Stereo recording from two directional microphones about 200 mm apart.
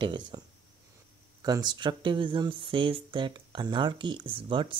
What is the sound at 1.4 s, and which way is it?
Speech, 20° right (ahead or behind).